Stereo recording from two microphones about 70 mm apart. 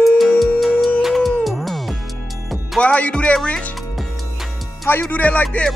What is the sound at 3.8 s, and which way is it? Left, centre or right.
Music, centre.